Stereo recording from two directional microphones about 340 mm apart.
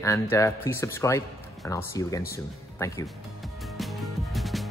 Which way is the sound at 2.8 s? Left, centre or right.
Centre.